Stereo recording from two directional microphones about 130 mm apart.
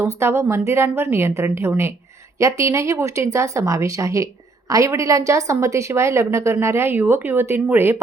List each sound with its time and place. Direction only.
0.0 s a woman's voice: 20° right (ahead or behind)